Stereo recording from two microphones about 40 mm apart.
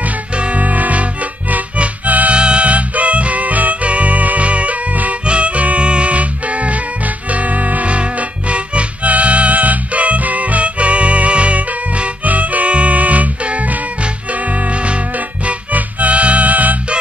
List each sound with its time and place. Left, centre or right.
0.4 s music: right
2.3 s music: right